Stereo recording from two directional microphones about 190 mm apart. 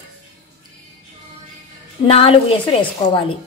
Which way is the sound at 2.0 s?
30° left (ahead or behind).